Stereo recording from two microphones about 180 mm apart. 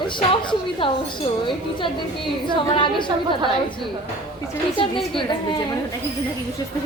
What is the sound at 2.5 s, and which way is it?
Speech, 25° left (ahead or behind).